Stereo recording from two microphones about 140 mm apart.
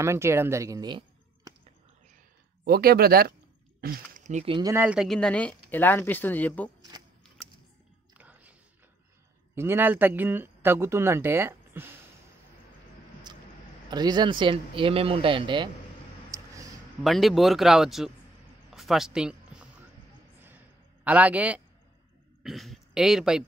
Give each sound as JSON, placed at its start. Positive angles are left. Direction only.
{"t": 0.0, "sound": "speech", "side_deg": -20}
{"t": 2.6, "sound": "speech", "side_deg": -90}
{"t": 3.8, "sound": "speech", "side_deg": -55}
{"t": 4.8, "sound": "speech", "side_deg": 0}
{"t": 8.2, "sound": "biting", "side_deg": -10}
{"t": 9.6, "sound": "speech", "side_deg": -15}
{"t": 13.3, "sound": "vehicle", "side_deg": -30}
{"t": 13.8, "sound": "speech", "side_deg": -30}
{"t": 16.3, "sound": "a sound", "side_deg": -25}
{"t": 17.0, "sound": "speech", "side_deg": 0}
{"t": 18.7, "sound": "a sound", "side_deg": 0}
{"t": 22.4, "sound": "speech", "side_deg": 0}